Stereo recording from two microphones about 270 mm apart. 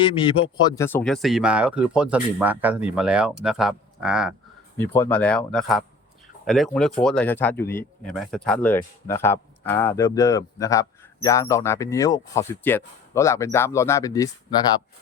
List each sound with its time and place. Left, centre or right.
0.0 s speech: centre
0.9 s speech: centre